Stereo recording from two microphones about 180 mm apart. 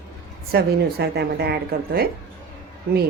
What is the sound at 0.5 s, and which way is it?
Speech, 65° right (ahead or behind).